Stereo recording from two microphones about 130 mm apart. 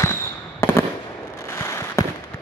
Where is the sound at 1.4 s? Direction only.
20° left (ahead or behind).